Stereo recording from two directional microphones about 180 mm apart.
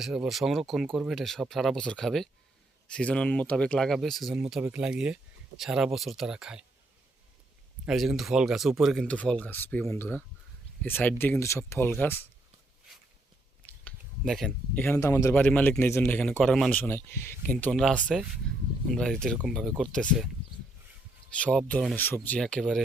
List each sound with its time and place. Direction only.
0.0 s speech: 5° right (ahead or behind)
7.9 s a man's voice: centre (ahead or behind)
13.8 s a sound: centre (ahead or behind)
14.8 s a man's voice: 15° left (ahead or behind)
21.3 s a man's voice: 5° left (ahead or behind)